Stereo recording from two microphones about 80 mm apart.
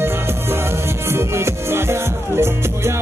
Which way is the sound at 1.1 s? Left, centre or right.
Right.